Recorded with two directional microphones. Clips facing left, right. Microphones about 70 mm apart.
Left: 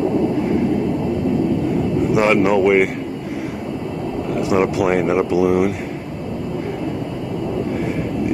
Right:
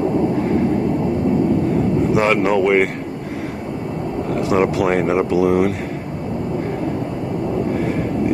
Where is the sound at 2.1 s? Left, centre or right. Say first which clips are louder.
Left 3 dB; centre.